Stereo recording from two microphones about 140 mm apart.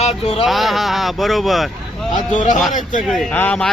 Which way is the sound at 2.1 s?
60° left (ahead or behind).